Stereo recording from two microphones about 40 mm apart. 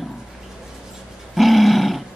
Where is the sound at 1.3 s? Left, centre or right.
Centre.